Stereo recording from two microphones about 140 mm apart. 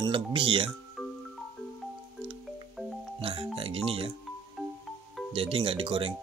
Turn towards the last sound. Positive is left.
turn(degrees=-40)  # may be behind; listen again after turning